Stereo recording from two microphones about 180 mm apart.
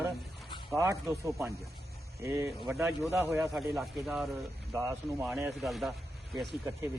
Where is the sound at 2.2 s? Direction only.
15° right (ahead or behind).